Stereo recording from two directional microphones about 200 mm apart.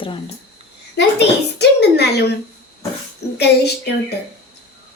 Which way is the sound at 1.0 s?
55° left (ahead or behind).